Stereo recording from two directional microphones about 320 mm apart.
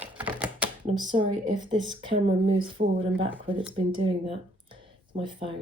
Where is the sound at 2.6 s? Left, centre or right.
Centre.